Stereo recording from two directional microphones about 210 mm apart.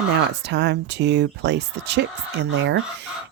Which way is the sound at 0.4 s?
55° right (ahead or behind).